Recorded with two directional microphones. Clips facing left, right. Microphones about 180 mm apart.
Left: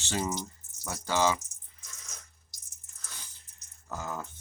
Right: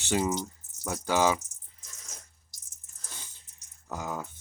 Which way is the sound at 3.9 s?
15° right (ahead or behind).